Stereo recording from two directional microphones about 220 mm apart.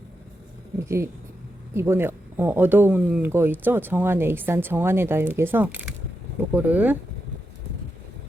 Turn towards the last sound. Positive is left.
turn(degrees=-5)  # may be behind; listen again after turning